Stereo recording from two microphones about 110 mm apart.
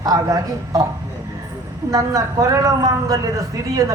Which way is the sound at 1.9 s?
30° right (ahead or behind).